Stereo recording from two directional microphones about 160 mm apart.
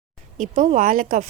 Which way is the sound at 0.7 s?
55° right (ahead or behind).